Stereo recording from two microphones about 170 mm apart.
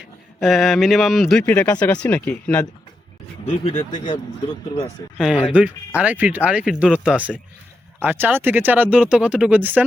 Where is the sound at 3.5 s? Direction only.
40° left (ahead or behind).